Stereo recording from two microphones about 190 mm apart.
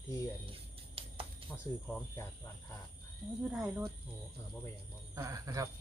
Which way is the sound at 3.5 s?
5° right (ahead or behind).